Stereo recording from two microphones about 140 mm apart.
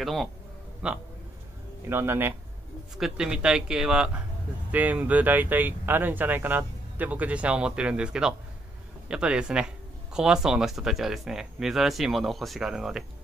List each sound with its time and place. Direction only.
0.0 s speech: centre (ahead or behind); by 2.3 s 15° right (ahead or behind)
3.0 s speech: 5° right (ahead or behind)